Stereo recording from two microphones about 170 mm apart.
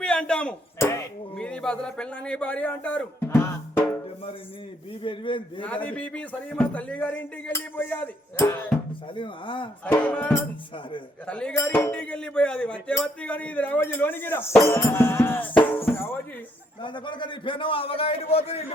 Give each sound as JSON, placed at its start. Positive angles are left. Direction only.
{"t": 0.0, "sound": "a sound", "side_deg": 5}
{"t": 1.4, "sound": "speech", "side_deg": 5}
{"t": 5.0, "sound": "a man's voice", "side_deg": 30}
{"t": 5.6, "sound": "speech", "side_deg": 10}
{"t": 9.1, "sound": "a man's voice", "side_deg": 30}
{"t": 9.8, "sound": "speech", "side_deg": 10}
{"t": 16.8, "sound": "a man's voice", "side_deg": 25}